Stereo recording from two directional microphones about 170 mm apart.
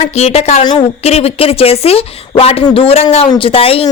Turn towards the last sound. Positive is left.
turn(degrees=35)  # may be behind; listen again after turning